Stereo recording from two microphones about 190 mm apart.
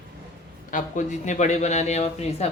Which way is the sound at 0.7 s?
40° left (ahead or behind).